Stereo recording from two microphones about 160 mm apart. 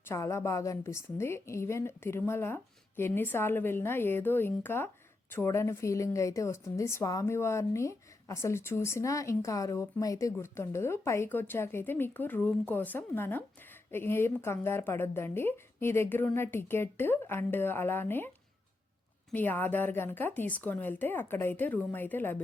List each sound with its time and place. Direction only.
0.0 s a woman's voice: 15° left (ahead or behind)
19.3 s a woman's voice: 10° left (ahead or behind)